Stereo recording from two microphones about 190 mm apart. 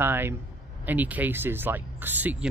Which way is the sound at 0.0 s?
10° right (ahead or behind).